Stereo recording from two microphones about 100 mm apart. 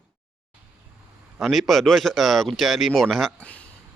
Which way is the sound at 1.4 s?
Centre (ahead or behind).